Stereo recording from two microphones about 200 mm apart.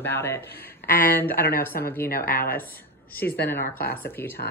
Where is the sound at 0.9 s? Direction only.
45° left (ahead or behind).